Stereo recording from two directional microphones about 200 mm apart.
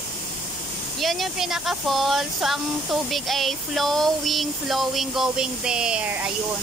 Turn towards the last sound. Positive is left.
turn(degrees=-5)  # may be behind; listen again after turning